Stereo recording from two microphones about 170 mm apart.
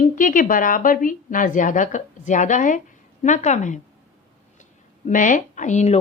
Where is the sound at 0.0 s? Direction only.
55° left (ahead or behind).